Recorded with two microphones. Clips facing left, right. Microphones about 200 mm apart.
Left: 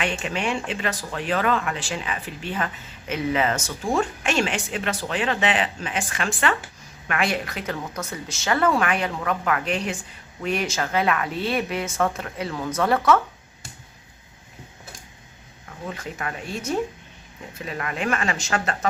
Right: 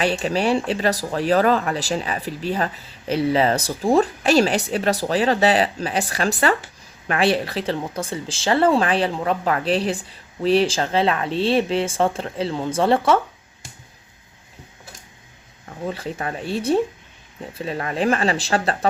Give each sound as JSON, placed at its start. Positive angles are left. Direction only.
{"t": 0.0, "sound": "speech", "side_deg": -35}
{"t": 15.9, "sound": "speech", "side_deg": -30}